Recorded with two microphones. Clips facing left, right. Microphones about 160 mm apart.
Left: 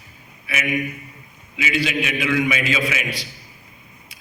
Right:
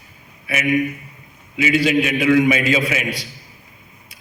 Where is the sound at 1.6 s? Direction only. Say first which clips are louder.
Right 6 dB; 45° right (ahead or behind).